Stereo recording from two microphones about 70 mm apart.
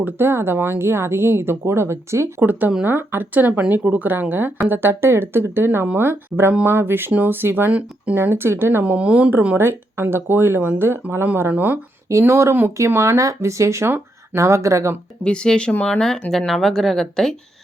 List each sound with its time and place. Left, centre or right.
0.0 s speech: right
2.4 s speech: right
8.2 s speech: right
8.8 s speech: centre
9.6 s speech: right
12.2 s speech: right
15.2 s speech: centre